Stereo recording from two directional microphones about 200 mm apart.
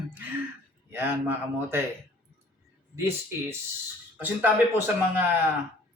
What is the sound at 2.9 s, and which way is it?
Speech, 10° right (ahead or behind).